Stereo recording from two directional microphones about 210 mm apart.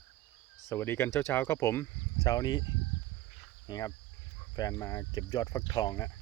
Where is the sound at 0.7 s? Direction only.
10° left (ahead or behind).